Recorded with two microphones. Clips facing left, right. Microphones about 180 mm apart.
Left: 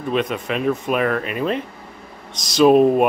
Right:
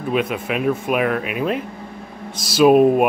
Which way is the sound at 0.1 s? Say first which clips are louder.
Right 1 dB; 5° right (ahead or behind).